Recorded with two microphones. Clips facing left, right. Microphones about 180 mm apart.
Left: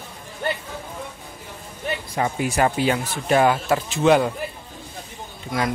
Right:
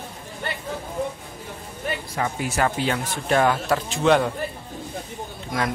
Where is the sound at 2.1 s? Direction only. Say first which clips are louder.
Left 4 dB; 20° left (ahead or behind).